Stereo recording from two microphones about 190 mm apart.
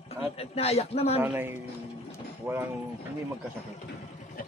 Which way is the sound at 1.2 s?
10° right (ahead or behind).